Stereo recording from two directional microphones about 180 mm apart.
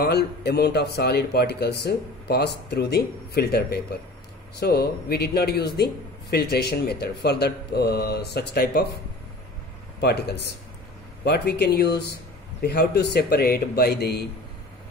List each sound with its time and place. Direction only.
0.0 s speech: 65° left (ahead or behind)
9.9 s speech: 65° left (ahead or behind)